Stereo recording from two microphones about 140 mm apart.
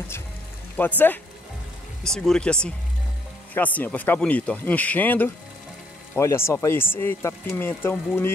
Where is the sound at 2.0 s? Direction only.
5° left (ahead or behind).